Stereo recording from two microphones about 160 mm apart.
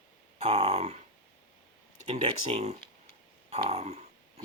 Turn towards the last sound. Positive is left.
turn(degrees=-45)  # may be behind; listen again after turning